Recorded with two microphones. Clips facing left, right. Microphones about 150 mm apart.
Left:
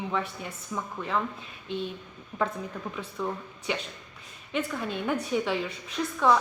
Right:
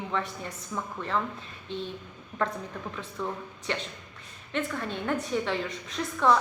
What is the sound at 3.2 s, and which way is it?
A woman's voice, 5° left (ahead or behind).